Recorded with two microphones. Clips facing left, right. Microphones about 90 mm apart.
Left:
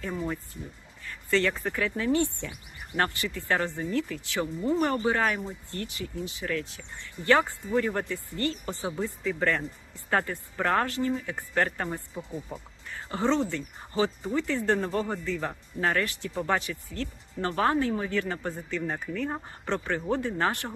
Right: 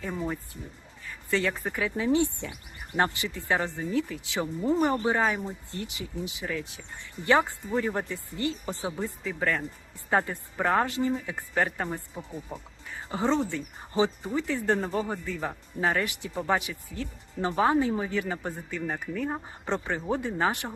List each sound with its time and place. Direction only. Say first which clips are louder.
0.0 s speech: even; 5° right (ahead or behind)
10.1 s a woman's voice: right 1 dB; 15° right (ahead or behind)